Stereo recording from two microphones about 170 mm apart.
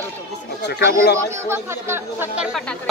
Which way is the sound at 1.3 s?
15° right (ahead or behind).